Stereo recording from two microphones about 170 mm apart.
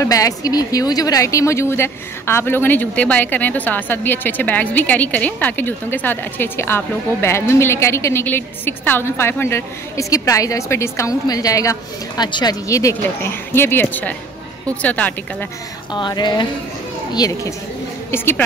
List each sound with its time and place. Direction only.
0.0 s a woman's voice: 20° left (ahead or behind)
15.9 s a sound: 25° left (ahead or behind)
18.1 s a woman's voice: 15° left (ahead or behind)